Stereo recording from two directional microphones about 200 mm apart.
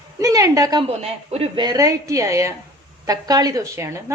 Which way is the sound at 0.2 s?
15° right (ahead or behind).